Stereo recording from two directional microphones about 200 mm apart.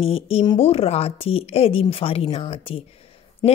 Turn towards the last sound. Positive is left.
turn(degrees=20)  # may be behind; listen again after turning